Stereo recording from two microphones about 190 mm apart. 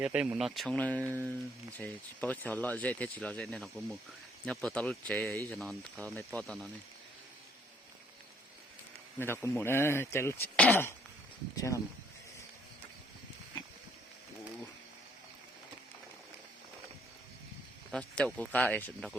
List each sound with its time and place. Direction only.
0.0 s speech: 5° right (ahead or behind)
9.1 s speech: 10° left (ahead or behind)
17.9 s speech: 5° left (ahead or behind)